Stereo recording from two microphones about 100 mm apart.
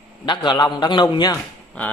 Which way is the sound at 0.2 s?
50° left (ahead or behind).